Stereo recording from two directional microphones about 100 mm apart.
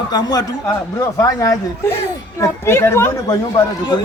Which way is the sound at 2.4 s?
25° left (ahead or behind).